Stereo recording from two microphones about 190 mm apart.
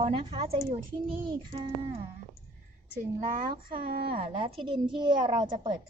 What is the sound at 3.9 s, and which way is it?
Speech, 50° right (ahead or behind).